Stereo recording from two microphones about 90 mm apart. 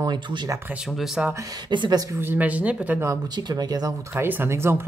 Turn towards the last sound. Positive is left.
turn(degrees=-25)  # may be behind; listen again after turning